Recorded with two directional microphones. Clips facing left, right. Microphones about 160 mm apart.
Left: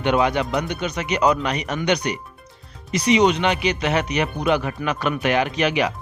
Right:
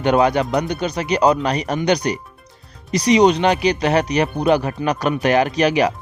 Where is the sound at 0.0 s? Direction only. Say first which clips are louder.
Right 4 dB; 40° right (ahead or behind).